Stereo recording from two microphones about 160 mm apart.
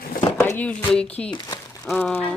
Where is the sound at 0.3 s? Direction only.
15° left (ahead or behind).